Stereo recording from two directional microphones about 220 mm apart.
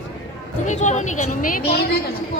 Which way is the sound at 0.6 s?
35° left (ahead or behind).